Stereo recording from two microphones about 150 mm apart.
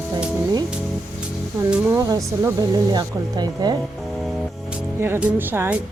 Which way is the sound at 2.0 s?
20° right (ahead or behind).